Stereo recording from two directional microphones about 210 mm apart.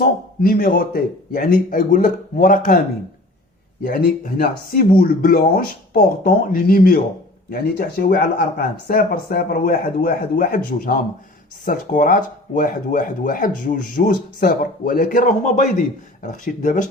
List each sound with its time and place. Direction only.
0.0 s speech: 45° left (ahead or behind)
3.8 s speech: 40° left (ahead or behind)